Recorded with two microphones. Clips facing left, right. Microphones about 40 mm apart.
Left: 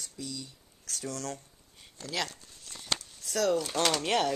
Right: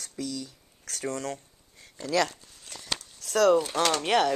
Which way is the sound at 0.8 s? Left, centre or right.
Right.